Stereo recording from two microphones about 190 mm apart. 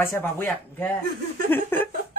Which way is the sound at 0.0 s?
10° left (ahead or behind).